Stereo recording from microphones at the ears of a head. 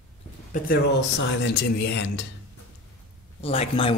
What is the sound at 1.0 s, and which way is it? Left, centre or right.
Speech, left.